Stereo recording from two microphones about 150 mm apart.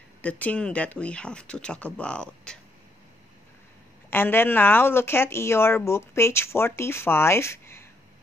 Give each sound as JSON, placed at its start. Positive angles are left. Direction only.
{"t": 0.2, "sound": "speech", "side_deg": 10}
{"t": 4.1, "sound": "speech", "side_deg": 15}